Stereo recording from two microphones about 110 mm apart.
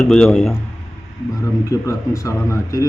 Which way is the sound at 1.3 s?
30° left (ahead or behind).